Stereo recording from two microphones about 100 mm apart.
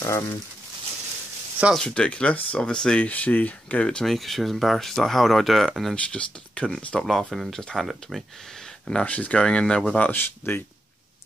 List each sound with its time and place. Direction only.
0.0 s speech: 30° left (ahead or behind)
1.7 s speech: 5° left (ahead or behind)
5.9 s speech: 10° left (ahead or behind)
8.8 s speech: 10° left (ahead or behind)